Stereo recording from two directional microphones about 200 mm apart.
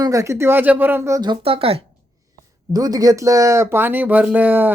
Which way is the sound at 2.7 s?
20° right (ahead or behind).